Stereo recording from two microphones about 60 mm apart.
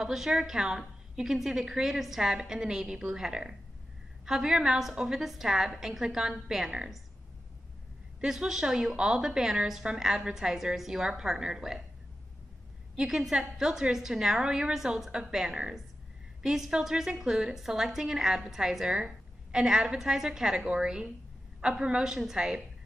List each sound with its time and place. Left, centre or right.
0.0 s a woman's voice: centre
8.2 s a woman's voice: centre
12.9 s a woman's voice: centre